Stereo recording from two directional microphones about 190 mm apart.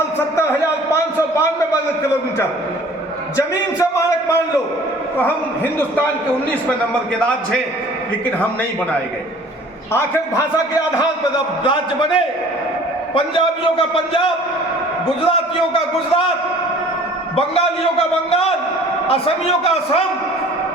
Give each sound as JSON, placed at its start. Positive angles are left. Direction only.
{"t": 3.3, "sound": "a man's voice", "side_deg": 15}
{"t": 5.1, "sound": "a man's voice", "side_deg": 10}
{"t": 9.9, "sound": "a man's voice", "side_deg": 15}
{"t": 11.6, "sound": "a man's voice", "side_deg": 25}
{"t": 15.3, "sound": "a man's voice", "side_deg": 30}
{"t": 17.3, "sound": "a man's voice", "side_deg": 30}